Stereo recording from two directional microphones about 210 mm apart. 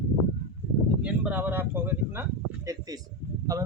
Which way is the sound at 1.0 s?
5° right (ahead or behind).